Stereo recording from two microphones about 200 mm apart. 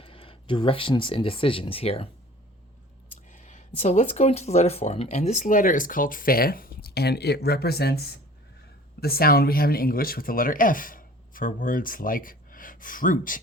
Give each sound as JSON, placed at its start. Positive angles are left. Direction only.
{"t": 0.0, "sound": "speech", "side_deg": 25}
{"t": 3.2, "sound": "speech", "side_deg": 40}